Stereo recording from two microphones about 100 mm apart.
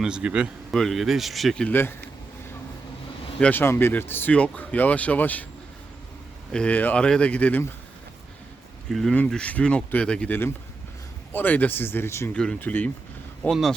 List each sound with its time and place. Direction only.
0.0 s a man's voice: 10° right (ahead or behind)
0.7 s speech: centre (ahead or behind)
1.6 s speech: 20° left (ahead or behind)
3.4 s speech: 20° left (ahead or behind)
6.5 s speech: 10° left (ahead or behind)
8.9 s speech: 5° left (ahead or behind)
9.1 s speech: 15° left (ahead or behind)
12.3 s speech: 10° left (ahead or behind)
13.4 s speech: centre (ahead or behind)